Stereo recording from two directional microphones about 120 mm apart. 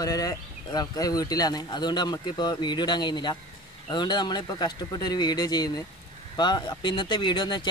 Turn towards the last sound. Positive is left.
turn(degrees=40)  # may be behind; listen again after turning